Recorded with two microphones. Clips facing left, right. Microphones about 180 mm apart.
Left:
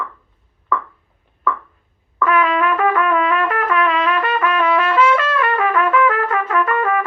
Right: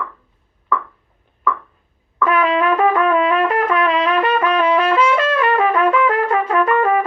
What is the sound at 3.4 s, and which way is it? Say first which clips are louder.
Trumpet: right 2 dB; 35° right (ahead or behind).